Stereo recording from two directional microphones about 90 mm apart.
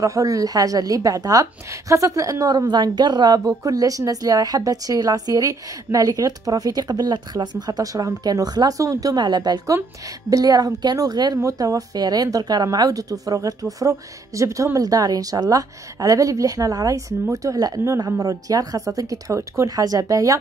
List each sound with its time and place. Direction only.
0.0 s a woman's voice: 35° right (ahead or behind)